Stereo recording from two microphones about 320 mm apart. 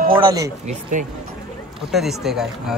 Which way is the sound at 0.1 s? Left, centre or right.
Centre.